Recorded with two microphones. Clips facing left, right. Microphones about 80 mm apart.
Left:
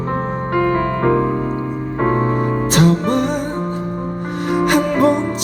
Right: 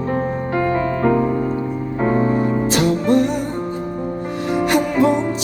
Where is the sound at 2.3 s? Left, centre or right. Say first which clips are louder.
Left 1 dB; left.